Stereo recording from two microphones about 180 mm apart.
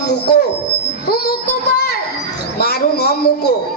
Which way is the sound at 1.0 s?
60° left (ahead or behind).